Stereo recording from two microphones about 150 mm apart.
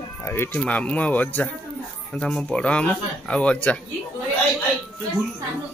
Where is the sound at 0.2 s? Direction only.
15° left (ahead or behind).